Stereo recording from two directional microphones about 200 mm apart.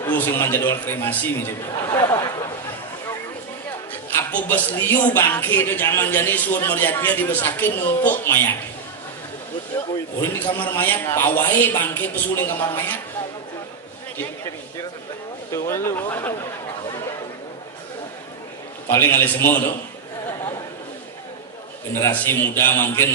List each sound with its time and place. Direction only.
0.0 s a man's voice: 10° left (ahead or behind)
4.2 s a man's voice: 10° left (ahead or behind)
10.2 s a man's voice: 10° left (ahead or behind)
15.5 s a man's voice: 15° left (ahead or behind)
18.9 s a man's voice: 10° left (ahead or behind)
22.0 s a man's voice: 10° left (ahead or behind)